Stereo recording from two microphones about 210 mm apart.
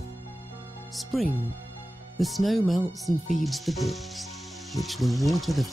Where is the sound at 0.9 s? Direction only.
Centre (ahead or behind).